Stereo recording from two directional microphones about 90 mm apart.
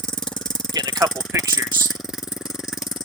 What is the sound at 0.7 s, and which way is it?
Vehicle, 45° right (ahead or behind).